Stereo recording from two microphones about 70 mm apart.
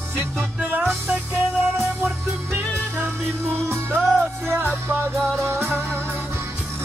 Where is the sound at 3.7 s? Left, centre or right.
Right.